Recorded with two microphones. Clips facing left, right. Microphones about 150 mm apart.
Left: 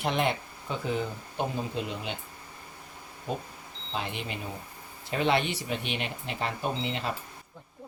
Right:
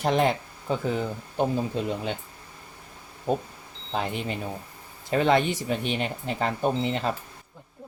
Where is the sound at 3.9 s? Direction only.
40° right (ahead or behind).